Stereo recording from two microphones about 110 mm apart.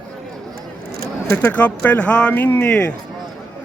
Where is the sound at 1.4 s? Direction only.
15° left (ahead or behind).